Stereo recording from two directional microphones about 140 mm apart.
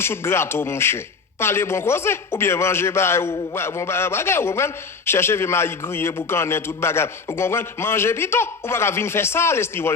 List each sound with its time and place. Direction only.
0.0 s a man's voice: 15° left (ahead or behind)